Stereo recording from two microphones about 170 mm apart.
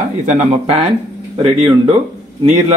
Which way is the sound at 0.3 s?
40° right (ahead or behind).